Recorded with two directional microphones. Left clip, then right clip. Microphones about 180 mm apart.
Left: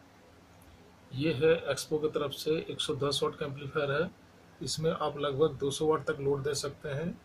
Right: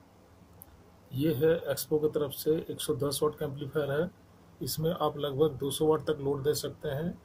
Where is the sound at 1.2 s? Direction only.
15° right (ahead or behind).